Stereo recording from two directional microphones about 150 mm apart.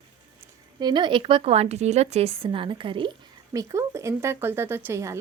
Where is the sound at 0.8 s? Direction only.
30° right (ahead or behind).